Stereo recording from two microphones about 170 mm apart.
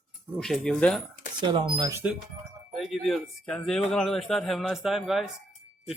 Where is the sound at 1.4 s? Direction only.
25° right (ahead or behind).